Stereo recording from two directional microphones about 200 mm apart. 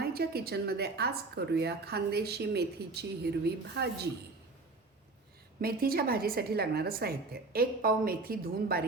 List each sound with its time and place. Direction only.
0.0 s a woman's voice: 50° right (ahead or behind)
5.5 s a woman's voice: 50° right (ahead or behind)